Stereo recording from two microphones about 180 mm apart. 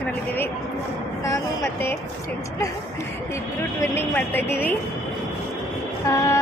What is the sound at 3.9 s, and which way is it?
Speech, 10° left (ahead or behind).